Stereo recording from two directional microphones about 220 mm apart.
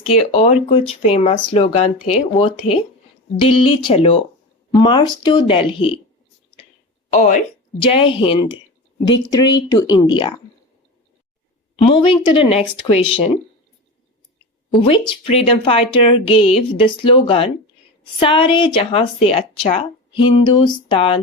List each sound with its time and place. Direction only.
0.0 s speech: 25° left (ahead or behind)
7.1 s speech: 30° left (ahead or behind)
9.9 s speech: 20° left (ahead or behind)
11.8 s speech: 25° left (ahead or behind)
14.8 s speech: 25° left (ahead or behind)